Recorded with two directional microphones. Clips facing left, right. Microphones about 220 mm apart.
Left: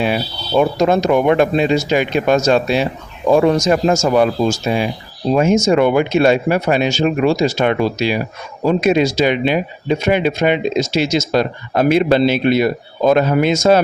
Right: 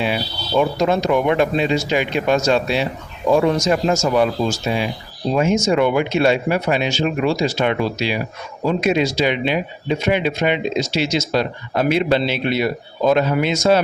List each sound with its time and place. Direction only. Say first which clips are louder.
0.0 s speech: left 3 dB; 45° left (ahead or behind)